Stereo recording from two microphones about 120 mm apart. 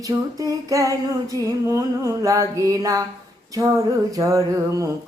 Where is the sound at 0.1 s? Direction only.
30° right (ahead or behind).